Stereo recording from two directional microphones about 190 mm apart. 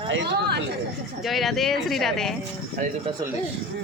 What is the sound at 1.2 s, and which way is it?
Speech, centre (ahead or behind).